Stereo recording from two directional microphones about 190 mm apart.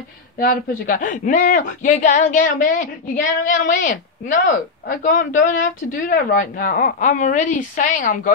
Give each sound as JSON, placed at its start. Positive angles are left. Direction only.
{"t": 0.4, "sound": "speech", "side_deg": 45}